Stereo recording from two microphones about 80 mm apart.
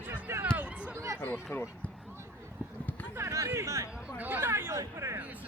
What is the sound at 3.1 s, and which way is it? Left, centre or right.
Speech, right.